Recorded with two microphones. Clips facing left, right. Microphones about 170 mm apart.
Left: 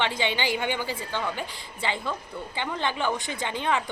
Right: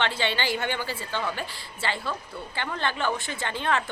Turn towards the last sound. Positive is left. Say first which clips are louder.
# even
turn(degrees=15)  # may be behind; listen again after turning